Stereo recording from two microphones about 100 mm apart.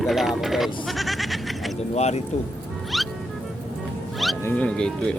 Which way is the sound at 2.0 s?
90° left.